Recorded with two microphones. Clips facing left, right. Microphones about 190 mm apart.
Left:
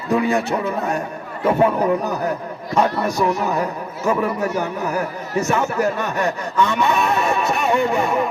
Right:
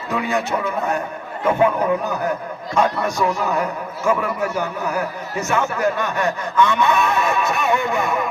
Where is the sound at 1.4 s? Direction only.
30° left (ahead or behind).